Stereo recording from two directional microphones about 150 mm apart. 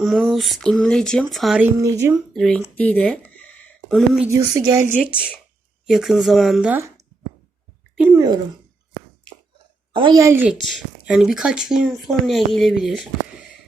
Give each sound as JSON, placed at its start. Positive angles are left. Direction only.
{"t": 0.0, "sound": "speech", "side_deg": 0}
{"t": 1.8, "sound": "a woman's voice", "side_deg": -20}
{"t": 2.3, "sound": "speech", "side_deg": 0}
{"t": 2.7, "sound": "a sound", "side_deg": 10}
{"t": 4.4, "sound": "a woman's voice", "side_deg": -20}
{"t": 5.8, "sound": "speech", "side_deg": 0}
{"t": 7.9, "sound": "speech", "side_deg": -10}
{"t": 9.9, "sound": "a woman's voice", "side_deg": -35}
{"t": 10.2, "sound": "a woman's voice", "side_deg": -15}
{"t": 10.5, "sound": "speech", "side_deg": 0}